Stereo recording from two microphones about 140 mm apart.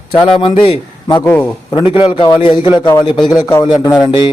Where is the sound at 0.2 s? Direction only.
35° left (ahead or behind).